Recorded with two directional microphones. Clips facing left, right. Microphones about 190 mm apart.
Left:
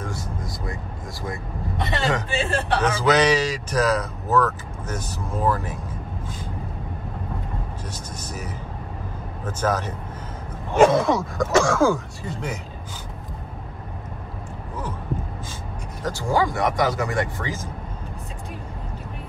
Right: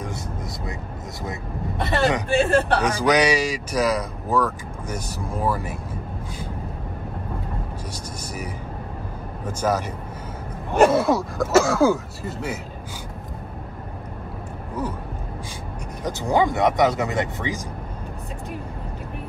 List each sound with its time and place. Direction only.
1.8 s vehicle: 55° right (ahead or behind)
2.2 s speech: 55° right (ahead or behind)
2.8 s speech: 15° right (ahead or behind)
9.4 s speech: 10° right (ahead or behind)
16.0 s speech: 20° right (ahead or behind)